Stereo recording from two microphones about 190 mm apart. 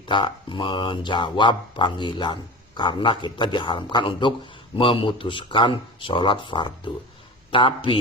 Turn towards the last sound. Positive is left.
turn(degrees=25)  # may be behind; listen again after turning